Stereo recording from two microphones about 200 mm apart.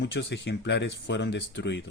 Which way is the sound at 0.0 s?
60° left (ahead or behind).